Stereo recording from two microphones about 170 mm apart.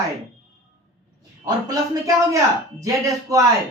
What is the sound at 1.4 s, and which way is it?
A man's voice, 20° right (ahead or behind).